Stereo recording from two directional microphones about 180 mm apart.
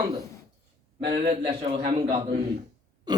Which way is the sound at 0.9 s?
25° right (ahead or behind).